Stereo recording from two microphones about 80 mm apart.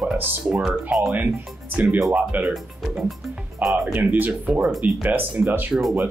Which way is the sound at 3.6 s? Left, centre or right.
Centre.